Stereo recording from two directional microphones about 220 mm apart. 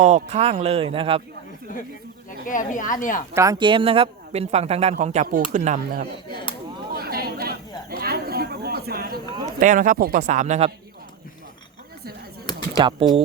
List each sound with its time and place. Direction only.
0.0 s speech: 30° right (ahead or behind)
2.5 s speech: 35° left (ahead or behind)
3.3 s speech: 15° right (ahead or behind); by 6.4 s 40° right (ahead or behind)
6.9 s chatter: 45° right (ahead or behind)
9.6 s speech: 35° right (ahead or behind)
12.7 s speech: 20° right (ahead or behind)